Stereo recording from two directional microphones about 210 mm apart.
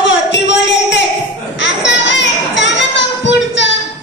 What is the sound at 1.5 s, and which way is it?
Children playing, 55° left (ahead or behind).